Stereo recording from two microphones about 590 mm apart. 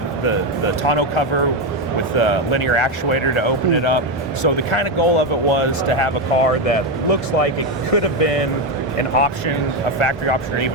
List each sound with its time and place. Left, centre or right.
0.9 s speech: left
10.0 s speech: left